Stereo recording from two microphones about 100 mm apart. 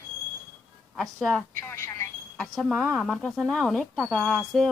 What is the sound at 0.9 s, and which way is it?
Speech, centre (ahead or behind).